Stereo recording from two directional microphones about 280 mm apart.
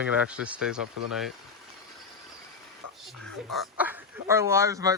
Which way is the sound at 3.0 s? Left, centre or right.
Centre.